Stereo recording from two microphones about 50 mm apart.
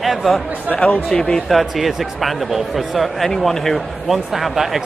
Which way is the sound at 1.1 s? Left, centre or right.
Centre.